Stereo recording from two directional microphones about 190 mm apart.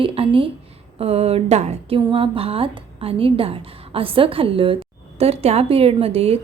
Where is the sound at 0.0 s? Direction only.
30° right (ahead or behind).